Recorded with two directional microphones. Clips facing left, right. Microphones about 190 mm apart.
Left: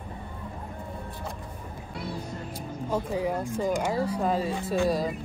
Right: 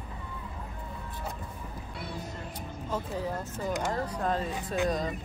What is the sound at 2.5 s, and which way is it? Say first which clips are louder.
Speech: left 6 dB; 10° left (ahead or behind).